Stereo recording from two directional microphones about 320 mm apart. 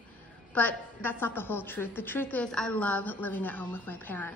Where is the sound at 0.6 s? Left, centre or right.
Centre.